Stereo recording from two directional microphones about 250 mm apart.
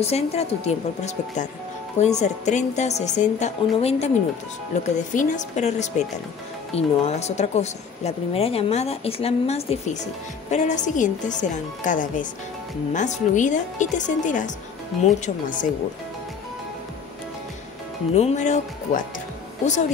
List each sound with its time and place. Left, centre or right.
0.0 s speech: left
18.1 s speech: left